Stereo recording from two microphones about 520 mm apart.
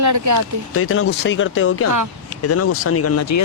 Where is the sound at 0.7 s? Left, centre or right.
Left.